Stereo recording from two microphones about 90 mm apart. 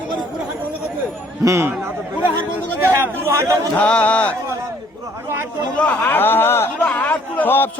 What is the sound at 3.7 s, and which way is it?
Chant, 15° left (ahead or behind).